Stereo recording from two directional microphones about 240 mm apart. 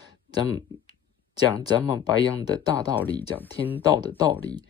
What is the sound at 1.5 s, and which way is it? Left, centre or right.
Speech, centre.